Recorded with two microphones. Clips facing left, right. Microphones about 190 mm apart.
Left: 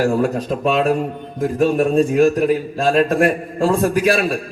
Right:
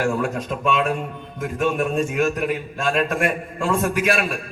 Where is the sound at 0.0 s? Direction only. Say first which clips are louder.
Left 5 dB; 35° left (ahead or behind).